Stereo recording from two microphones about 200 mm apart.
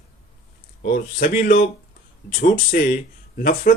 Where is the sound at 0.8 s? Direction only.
45° left (ahead or behind).